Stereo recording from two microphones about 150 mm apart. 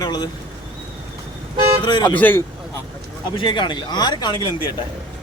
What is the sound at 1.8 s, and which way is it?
Speech, 30° left (ahead or behind).